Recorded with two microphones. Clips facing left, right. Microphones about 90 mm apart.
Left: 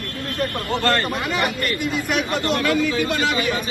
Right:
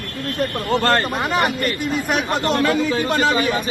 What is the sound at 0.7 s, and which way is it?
Speech, 35° right (ahead or behind).